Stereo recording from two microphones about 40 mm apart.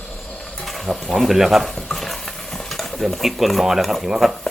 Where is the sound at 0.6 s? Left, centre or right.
Centre.